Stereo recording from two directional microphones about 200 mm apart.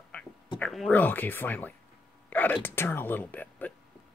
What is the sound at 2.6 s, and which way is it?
Speech, 10° left (ahead or behind).